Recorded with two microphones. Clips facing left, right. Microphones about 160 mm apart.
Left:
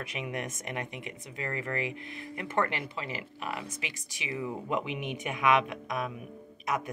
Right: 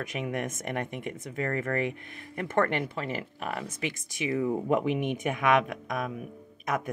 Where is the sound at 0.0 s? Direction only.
45° right (ahead or behind).